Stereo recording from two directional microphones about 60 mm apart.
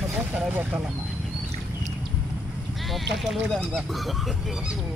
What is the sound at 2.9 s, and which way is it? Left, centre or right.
Speech, centre.